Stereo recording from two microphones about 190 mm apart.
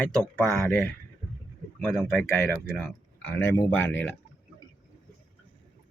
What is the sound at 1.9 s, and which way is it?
Speech, 10° left (ahead or behind).